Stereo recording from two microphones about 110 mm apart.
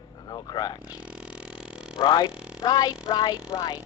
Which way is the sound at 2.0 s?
40° left (ahead or behind).